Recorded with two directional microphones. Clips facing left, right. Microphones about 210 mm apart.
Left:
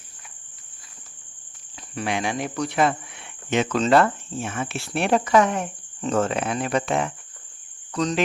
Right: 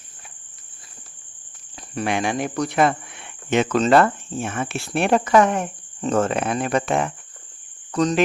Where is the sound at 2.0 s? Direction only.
55° right (ahead or behind).